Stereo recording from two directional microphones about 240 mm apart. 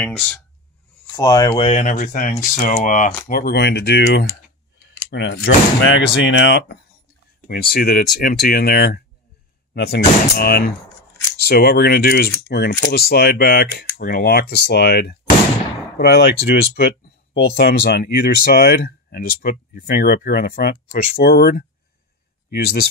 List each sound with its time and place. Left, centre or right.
0.0 s speech: centre; by 22.8 s left